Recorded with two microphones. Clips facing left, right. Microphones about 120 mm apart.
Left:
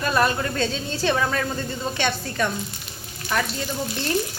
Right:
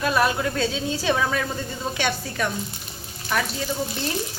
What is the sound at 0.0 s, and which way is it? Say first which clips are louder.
A woman's voice: even; 5° right (ahead or behind).